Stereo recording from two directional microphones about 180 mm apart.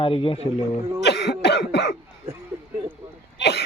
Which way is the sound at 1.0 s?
70° left (ahead or behind).